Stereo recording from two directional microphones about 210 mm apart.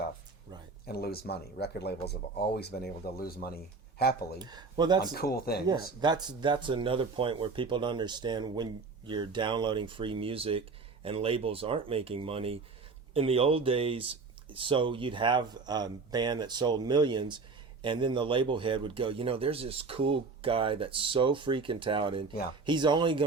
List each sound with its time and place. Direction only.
0.9 s speech: 50° left (ahead or behind)
4.4 s speech: 20° right (ahead or behind)
5.1 s speech: 45° left (ahead or behind)
5.6 s speech: 20° right (ahead or behind)